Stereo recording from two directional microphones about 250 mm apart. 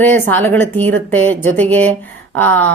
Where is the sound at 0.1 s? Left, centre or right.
Centre.